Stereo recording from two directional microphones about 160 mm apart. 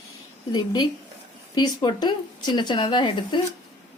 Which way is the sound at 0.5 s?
25° left (ahead or behind).